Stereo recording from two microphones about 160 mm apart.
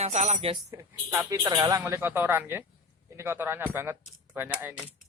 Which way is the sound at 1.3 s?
20° right (ahead or behind).